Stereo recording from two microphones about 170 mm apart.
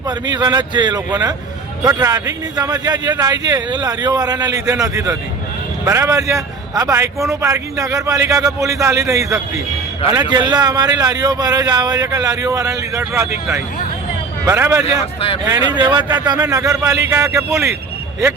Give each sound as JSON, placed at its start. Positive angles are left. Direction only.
{"t": 0.1, "sound": "a man's voice", "side_deg": -25}